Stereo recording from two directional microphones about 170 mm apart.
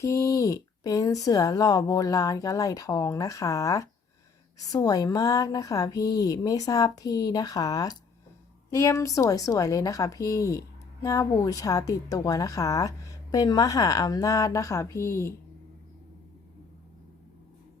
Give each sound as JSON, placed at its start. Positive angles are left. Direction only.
{"t": 0.0, "sound": "speech", "side_deg": 20}